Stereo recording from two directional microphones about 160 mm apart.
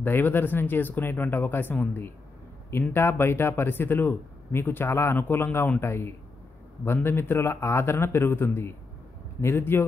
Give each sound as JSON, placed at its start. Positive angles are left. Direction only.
{"t": 0.0, "sound": "speech", "side_deg": 15}